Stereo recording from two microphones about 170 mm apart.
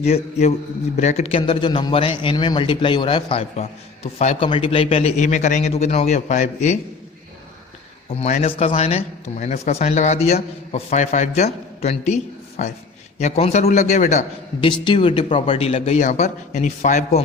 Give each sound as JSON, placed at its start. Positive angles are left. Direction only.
{"t": 0.0, "sound": "a man's voice", "side_deg": 40}
{"t": 8.1, "sound": "a man's voice", "side_deg": 35}
{"t": 14.6, "sound": "a man's voice", "side_deg": 30}